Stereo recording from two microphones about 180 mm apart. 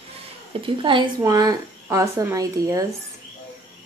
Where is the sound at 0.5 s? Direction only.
30° right (ahead or behind).